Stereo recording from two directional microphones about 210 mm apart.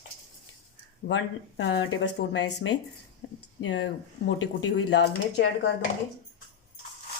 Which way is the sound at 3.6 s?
60° left (ahead or behind).